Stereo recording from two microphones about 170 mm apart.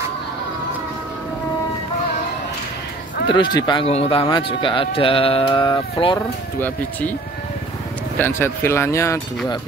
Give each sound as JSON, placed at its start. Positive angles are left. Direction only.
{"t": 3.5, "sound": "speech", "side_deg": 25}
{"t": 6.1, "sound": "speech", "side_deg": 10}
{"t": 8.2, "sound": "speech", "side_deg": 15}